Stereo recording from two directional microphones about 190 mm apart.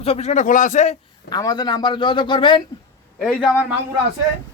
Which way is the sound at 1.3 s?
20° left (ahead or behind).